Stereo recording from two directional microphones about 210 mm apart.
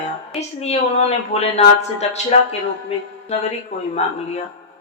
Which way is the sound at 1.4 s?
30° left (ahead or behind).